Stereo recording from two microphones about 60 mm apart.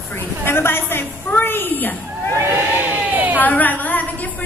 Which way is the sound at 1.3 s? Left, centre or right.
Left.